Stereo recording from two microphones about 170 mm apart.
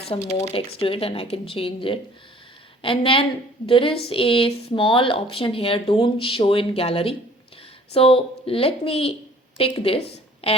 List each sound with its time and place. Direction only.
0.1 s speech: 40° left (ahead or behind)